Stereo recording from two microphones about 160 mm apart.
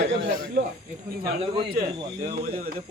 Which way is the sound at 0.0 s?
60° right (ahead or behind).